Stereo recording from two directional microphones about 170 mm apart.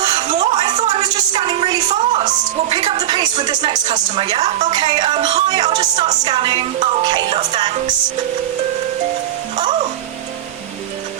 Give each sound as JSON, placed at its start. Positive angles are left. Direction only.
{"t": 0.0, "sound": "a sound", "side_deg": -25}
{"t": 1.0, "sound": "music", "side_deg": -25}
{"t": 2.6, "sound": "a woman's voice", "side_deg": -30}
{"t": 9.6, "sound": "music", "side_deg": -25}